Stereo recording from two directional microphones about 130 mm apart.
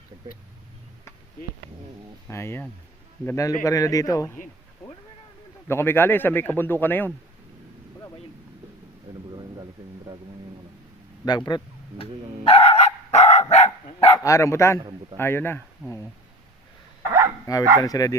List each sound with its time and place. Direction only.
2.2 s a man's voice: 20° left (ahead or behind)
5.6 s a man's voice: 20° left (ahead or behind)
9.3 s a sound: 30° right (ahead or behind)
11.3 s speech: 30° left (ahead or behind)
12.5 s dog: 50° left (ahead or behind)
14.3 s a man's voice: 25° left (ahead or behind)
14.8 s a man's voice: 35° right (ahead or behind)
15.2 s a man's voice: 15° left (ahead or behind)
17.4 s a man's voice: 25° left (ahead or behind)